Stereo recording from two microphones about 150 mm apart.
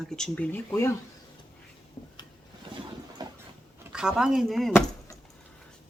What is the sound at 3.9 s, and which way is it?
Speech, 5° right (ahead or behind).